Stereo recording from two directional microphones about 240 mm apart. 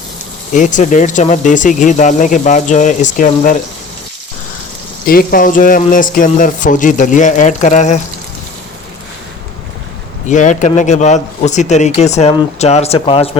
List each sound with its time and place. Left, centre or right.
0.5 s speech: left
5.0 s speech: left
10.2 s speech: left